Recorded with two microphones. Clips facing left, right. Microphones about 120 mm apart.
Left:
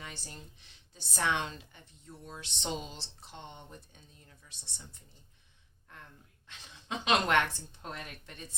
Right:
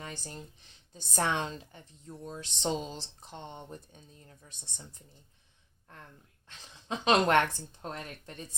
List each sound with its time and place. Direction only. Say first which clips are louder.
0.0 s speech: right 4 dB; 40° right (ahead or behind)
6.8 s speech: right 4 dB; 35° right (ahead or behind)